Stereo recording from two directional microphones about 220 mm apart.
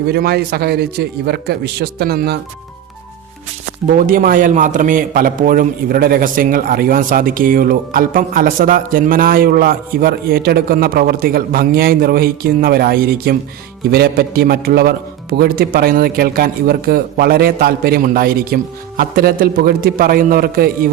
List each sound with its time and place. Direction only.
0.1 s a man's voice: 45° right (ahead or behind)
3.9 s a man's voice: 40° right (ahead or behind)